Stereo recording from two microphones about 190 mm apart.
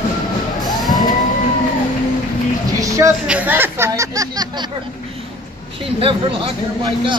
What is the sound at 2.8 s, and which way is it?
Speech, 15° right (ahead or behind).